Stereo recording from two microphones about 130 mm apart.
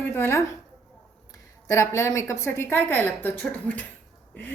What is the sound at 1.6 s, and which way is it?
A woman's voice, 20° left (ahead or behind).